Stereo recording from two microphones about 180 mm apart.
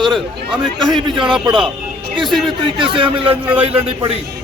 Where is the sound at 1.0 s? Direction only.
25° right (ahead or behind).